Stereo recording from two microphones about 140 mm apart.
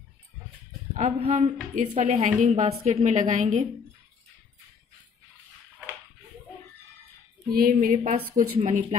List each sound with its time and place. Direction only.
0.9 s a woman's voice: 60° right (ahead or behind)
7.5 s a woman's voice: 80° right